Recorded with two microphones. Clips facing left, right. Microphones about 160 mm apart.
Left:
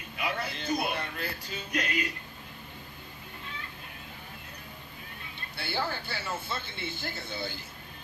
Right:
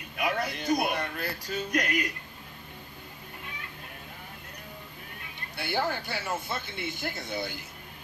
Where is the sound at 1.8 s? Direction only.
15° right (ahead or behind).